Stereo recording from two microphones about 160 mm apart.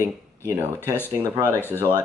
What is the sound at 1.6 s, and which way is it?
Speech, 15° left (ahead or behind).